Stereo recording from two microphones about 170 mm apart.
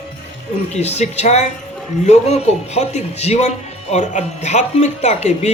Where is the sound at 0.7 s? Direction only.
40° left (ahead or behind).